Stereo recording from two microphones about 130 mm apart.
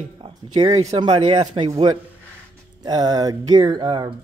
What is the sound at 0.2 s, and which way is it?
Speech, 45° right (ahead or behind).